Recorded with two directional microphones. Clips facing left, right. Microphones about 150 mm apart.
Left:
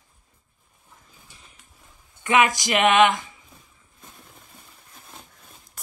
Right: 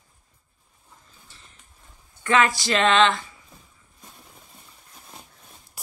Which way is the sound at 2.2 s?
15° left (ahead or behind).